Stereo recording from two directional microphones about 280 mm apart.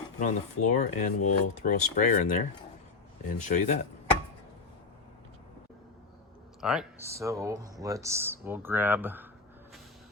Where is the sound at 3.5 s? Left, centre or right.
Left.